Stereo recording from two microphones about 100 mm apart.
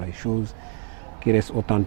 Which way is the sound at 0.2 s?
15° right (ahead or behind).